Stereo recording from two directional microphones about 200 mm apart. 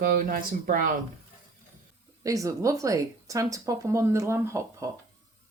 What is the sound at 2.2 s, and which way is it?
Speech, 15° right (ahead or behind).